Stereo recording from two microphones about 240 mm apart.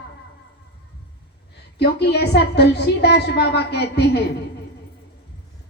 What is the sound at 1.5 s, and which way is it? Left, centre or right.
A woman's voice, left.